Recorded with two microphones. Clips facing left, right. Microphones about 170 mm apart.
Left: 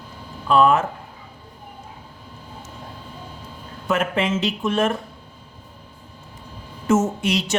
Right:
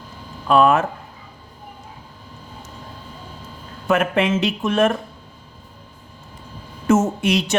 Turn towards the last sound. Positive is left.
turn(degrees=-60)  # may be behind; listen again after turning